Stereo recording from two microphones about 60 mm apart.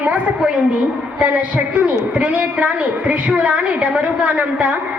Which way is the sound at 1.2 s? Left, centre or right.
Right.